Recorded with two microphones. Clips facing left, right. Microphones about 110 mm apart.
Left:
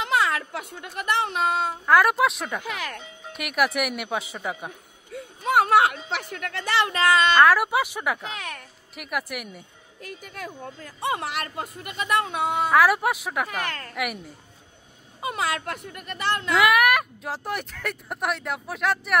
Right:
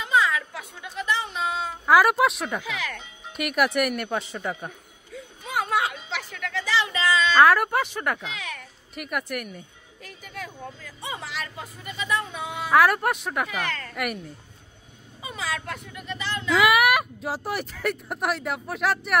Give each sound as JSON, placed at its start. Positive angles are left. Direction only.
{"t": 0.0, "sound": "speech", "side_deg": 70}
{"t": 1.9, "sound": "speech", "side_deg": -5}
{"t": 2.6, "sound": "speech", "side_deg": 50}
{"t": 3.3, "sound": "speech", "side_deg": 0}
{"t": 5.1, "sound": "a sound", "side_deg": 65}
{"t": 7.3, "sound": "speech", "side_deg": 0}
{"t": 10.0, "sound": "speech", "side_deg": 45}
{"t": 11.0, "sound": "speech", "side_deg": 60}
{"t": 12.7, "sound": "speech", "side_deg": 0}
{"t": 13.5, "sound": "speech", "side_deg": 45}
{"t": 13.9, "sound": "speech", "side_deg": 5}
{"t": 15.1, "sound": "speech", "side_deg": 65}
{"t": 16.5, "sound": "speech", "side_deg": 0}